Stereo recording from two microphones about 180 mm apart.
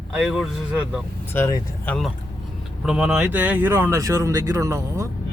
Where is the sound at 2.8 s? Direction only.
5° right (ahead or behind).